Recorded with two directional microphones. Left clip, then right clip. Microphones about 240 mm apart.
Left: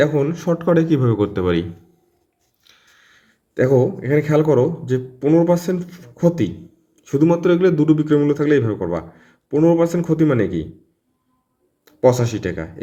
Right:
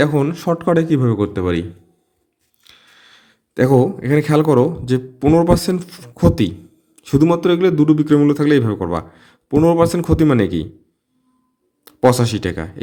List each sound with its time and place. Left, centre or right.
0.0 s speech: right; by 1.6 s centre
2.6 s a man's voice: right
11.9 s speech: right